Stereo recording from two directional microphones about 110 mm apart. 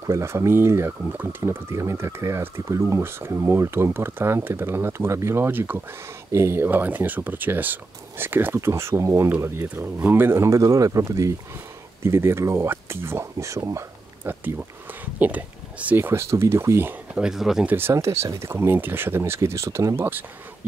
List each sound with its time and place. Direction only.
0.0 s speech: 25° right (ahead or behind)
17.1 s speech: 5° right (ahead or behind)
17.6 s speech: 20° right (ahead or behind)